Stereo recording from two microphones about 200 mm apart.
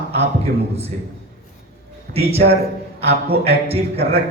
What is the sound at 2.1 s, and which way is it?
Speech, 30° right (ahead or behind).